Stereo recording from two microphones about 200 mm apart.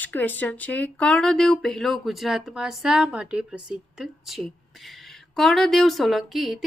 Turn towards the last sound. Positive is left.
turn(degrees=0)  # may be behind; listen again after turning